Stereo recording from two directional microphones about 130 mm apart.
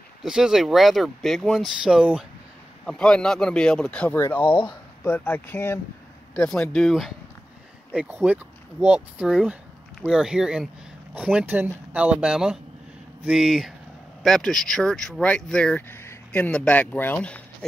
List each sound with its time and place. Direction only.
0.2 s speech: 5° right (ahead or behind)
4.4 s speech: 40° left (ahead or behind)
5.0 s speech: 15° left (ahead or behind); by 7.2 s centre (ahead or behind)
7.9 s speech: 10° right (ahead or behind); by 17.6 s 10° left (ahead or behind)